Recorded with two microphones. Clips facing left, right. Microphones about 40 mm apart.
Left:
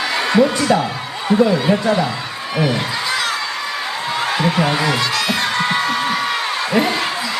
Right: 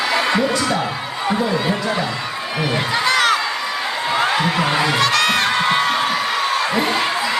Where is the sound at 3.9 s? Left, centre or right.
Centre.